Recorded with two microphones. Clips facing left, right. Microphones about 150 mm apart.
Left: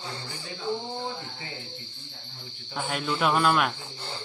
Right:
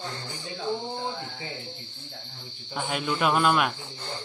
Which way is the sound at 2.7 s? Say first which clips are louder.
Right 1 dB; centre (ahead or behind).